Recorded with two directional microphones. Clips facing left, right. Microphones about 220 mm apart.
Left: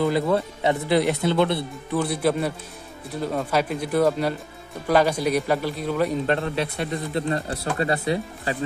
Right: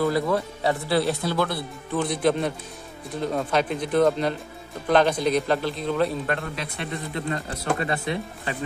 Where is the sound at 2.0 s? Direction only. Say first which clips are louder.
Even; 5° left (ahead or behind).